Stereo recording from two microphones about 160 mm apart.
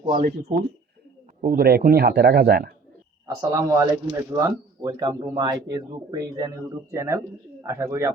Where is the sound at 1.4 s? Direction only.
70° right (ahead or behind).